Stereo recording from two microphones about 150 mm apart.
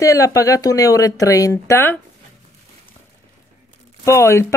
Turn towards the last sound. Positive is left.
turn(degrees=20)  # may be behind; listen again after turning